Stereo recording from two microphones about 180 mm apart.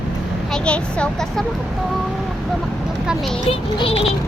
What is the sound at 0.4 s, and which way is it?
Speech, 5° left (ahead or behind).